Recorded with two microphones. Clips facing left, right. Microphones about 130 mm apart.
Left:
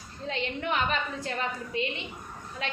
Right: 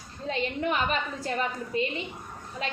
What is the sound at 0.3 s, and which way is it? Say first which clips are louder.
Speech: right 3 dB; 40° right (ahead or behind).